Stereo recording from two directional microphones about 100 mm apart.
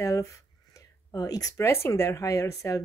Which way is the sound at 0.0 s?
35° left (ahead or behind).